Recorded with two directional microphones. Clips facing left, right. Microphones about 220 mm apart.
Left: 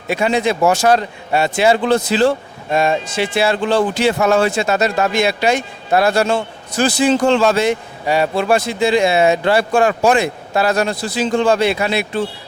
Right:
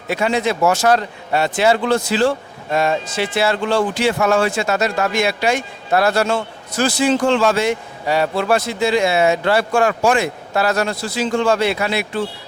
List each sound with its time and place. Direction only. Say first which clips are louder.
0.1 s a man's voice: left 2 dB; 15° left (ahead or behind)